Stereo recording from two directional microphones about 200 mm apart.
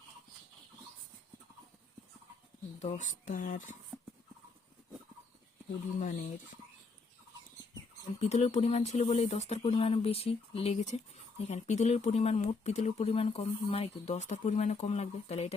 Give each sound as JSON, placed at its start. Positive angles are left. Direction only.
{"t": 2.8, "sound": "speech", "side_deg": 35}
{"t": 6.0, "sound": "speech", "side_deg": 40}
{"t": 8.2, "sound": "speech", "side_deg": 35}